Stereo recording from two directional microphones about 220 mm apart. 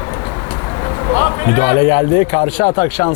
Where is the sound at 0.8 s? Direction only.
20° left (ahead or behind).